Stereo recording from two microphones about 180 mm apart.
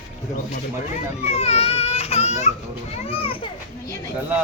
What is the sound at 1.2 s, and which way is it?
Baby cry, 35° left (ahead or behind).